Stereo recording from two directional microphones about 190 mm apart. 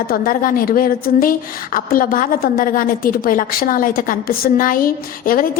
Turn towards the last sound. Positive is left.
turn(degrees=50)  # may be behind; listen again after turning